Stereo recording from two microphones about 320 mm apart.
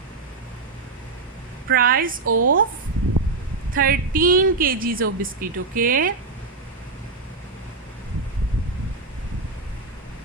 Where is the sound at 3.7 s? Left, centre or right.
Right.